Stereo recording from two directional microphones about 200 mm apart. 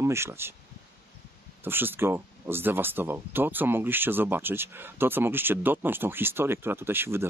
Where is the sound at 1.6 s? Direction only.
10° right (ahead or behind).